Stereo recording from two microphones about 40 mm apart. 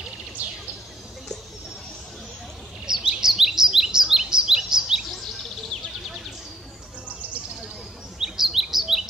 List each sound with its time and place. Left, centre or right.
0.4 s bird: right
2.9 s chirp: centre
5.1 s bird: centre
8.2 s chirp: centre